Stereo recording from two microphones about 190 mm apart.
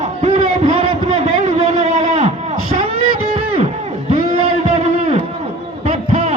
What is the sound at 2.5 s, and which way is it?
Beatboxing, 90° left.